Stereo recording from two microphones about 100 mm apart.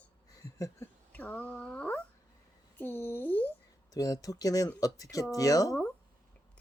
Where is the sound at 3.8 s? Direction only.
35° left (ahead or behind).